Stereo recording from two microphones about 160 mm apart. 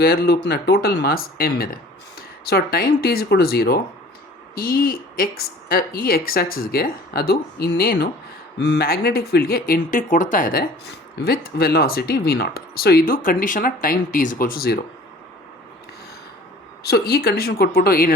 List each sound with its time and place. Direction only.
0.0 s speech: 70° left (ahead or behind)
8.5 s speech: 90° left; by 14.8 s 70° left (ahead or behind)
16.8 s speech: 75° left (ahead or behind)